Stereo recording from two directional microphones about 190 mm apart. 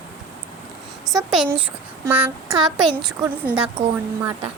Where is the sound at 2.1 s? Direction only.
10° right (ahead or behind).